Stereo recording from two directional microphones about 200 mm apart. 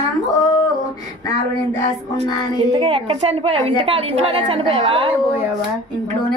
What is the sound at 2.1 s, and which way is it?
A woman's voice, 30° right (ahead or behind).